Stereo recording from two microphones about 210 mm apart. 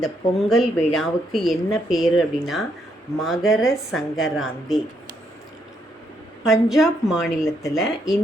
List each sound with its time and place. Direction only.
0.0 s speech: centre (ahead or behind)
6.4 s speech: centre (ahead or behind)
7.4 s speech: 15° left (ahead or behind)